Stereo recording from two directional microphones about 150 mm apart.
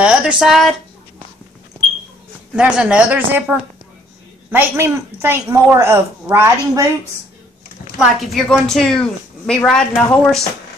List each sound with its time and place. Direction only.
0.0 s a woman's voice: 5° right (ahead or behind)
2.5 s a woman's voice: 5° right (ahead or behind)
8.0 s a woman's voice: centre (ahead or behind)